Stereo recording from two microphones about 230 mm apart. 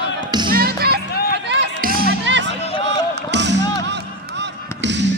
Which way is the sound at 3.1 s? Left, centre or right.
Right.